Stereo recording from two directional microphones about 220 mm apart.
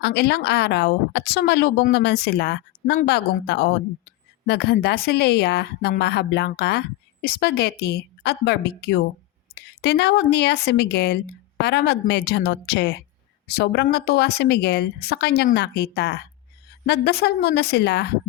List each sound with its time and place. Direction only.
0.0 s a woman's voice: 50° left (ahead or behind)